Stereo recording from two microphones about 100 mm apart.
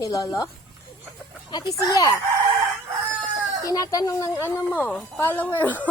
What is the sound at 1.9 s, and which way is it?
Speech, 35° left (ahead or behind).